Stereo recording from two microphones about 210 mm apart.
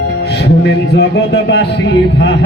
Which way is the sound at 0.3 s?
55° left (ahead or behind).